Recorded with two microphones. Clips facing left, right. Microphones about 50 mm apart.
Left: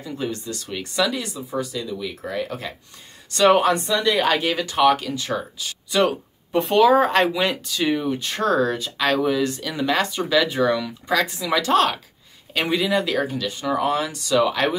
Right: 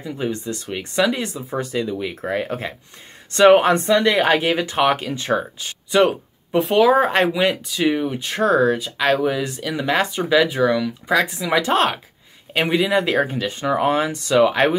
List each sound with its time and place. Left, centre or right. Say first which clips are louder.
0.0 s speech: right 3 dB; right
4.2 s speech: right 3 dB; right
6.6 s speech: right 1 dB; centre
10.4 s speech: right 3 dB; centre
11.1 s speech: right 2 dB; centre